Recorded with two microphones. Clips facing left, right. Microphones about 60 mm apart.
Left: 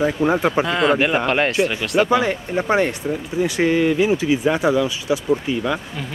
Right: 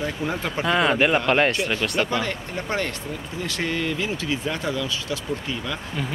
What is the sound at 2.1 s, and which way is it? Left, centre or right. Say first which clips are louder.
Speech: left 8 dB; centre.